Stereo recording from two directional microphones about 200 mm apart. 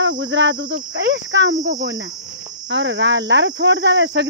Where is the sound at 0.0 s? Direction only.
70° right (ahead or behind).